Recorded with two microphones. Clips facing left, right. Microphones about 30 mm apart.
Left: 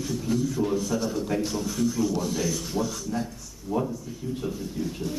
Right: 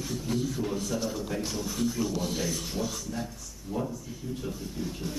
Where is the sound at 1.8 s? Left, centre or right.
Right.